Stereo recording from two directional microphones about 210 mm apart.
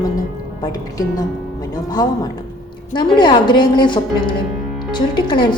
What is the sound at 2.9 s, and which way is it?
A woman's voice, 20° left (ahead or behind).